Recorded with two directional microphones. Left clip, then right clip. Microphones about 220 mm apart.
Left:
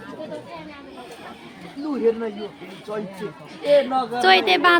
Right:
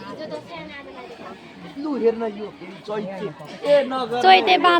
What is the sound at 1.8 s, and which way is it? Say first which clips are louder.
Speech: right 1 dB; 15° right (ahead or behind).